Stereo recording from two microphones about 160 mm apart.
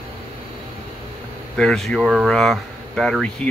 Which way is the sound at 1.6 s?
5° left (ahead or behind).